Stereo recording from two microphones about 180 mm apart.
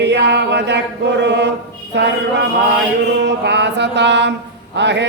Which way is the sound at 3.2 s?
75° right (ahead or behind).